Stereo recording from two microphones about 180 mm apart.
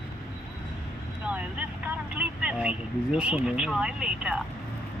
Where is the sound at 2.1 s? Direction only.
5° right (ahead or behind).